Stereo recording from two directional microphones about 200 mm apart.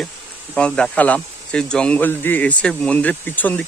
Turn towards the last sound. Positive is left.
turn(degrees=10)  # may be behind; listen again after turning